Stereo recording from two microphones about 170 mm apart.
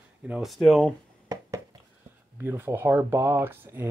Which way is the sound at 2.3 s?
10° right (ahead or behind).